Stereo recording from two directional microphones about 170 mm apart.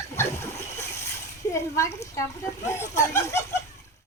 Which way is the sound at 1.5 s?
15° left (ahead or behind).